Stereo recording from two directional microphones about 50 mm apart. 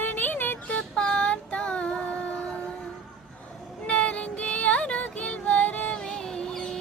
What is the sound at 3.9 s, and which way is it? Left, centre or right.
Music, left.